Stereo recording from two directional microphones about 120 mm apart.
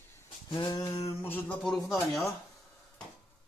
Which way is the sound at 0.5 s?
40° left (ahead or behind).